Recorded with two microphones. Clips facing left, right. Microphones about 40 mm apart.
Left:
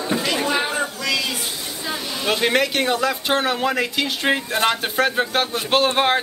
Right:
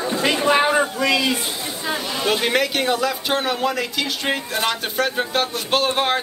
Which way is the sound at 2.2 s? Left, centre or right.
Centre.